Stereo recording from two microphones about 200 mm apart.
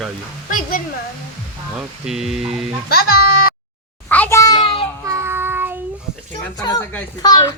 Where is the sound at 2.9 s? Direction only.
50° left (ahead or behind).